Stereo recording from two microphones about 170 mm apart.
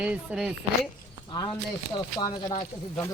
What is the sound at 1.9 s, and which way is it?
Speech, 25° left (ahead or behind).